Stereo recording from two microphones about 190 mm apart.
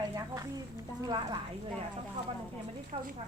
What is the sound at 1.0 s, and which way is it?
Speech, 25° right (ahead or behind).